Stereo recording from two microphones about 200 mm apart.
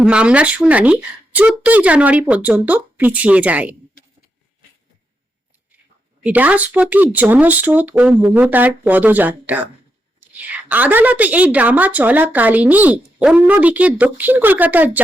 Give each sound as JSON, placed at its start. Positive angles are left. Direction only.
{"t": 0.0, "sound": "a woman's voice", "side_deg": -5}
{"t": 6.2, "sound": "a woman's voice", "side_deg": -5}